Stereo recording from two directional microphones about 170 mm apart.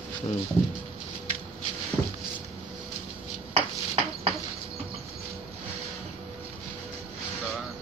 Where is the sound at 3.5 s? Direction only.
35° right (ahead or behind).